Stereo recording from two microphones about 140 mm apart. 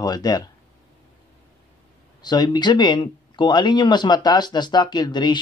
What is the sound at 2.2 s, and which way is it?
Speech, 30° left (ahead or behind).